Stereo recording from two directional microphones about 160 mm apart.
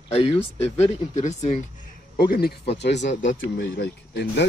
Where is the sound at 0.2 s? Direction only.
40° left (ahead or behind).